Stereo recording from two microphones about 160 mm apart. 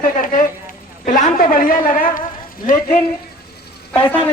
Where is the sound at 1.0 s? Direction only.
55° left (ahead or behind).